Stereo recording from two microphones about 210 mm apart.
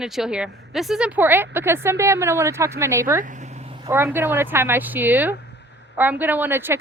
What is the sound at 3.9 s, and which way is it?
Speech, 10° right (ahead or behind).